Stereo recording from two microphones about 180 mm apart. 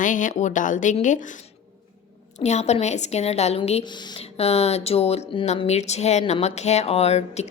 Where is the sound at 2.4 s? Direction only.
40° left (ahead or behind).